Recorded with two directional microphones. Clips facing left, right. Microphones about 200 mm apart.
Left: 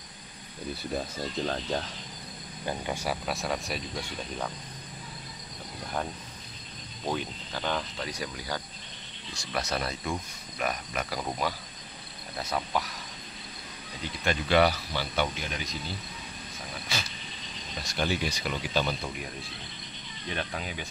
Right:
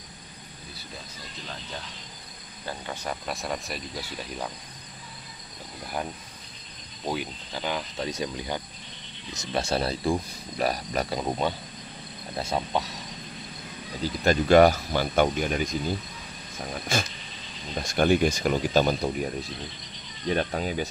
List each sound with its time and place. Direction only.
0.9 s speech: 50° left (ahead or behind)
2.6 s speech: 10° left (ahead or behind); by 4.5 s 5° right (ahead or behind)
7.1 s speech: 10° right (ahead or behind)
8.0 s speech: 25° right (ahead or behind)
11.1 s speech: 25° right (ahead or behind)
14.0 s speech: 40° right (ahead or behind)
20.3 s speech: 40° right (ahead or behind)